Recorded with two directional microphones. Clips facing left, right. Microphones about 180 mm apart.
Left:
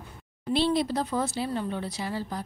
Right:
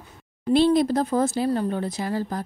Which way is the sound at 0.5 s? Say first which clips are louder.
Right 7 dB; 50° right (ahead or behind).